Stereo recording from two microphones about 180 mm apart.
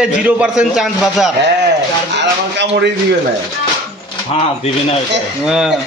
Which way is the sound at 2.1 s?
75° right (ahead or behind).